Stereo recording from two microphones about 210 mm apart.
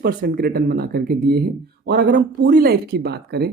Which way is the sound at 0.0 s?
45° right (ahead or behind).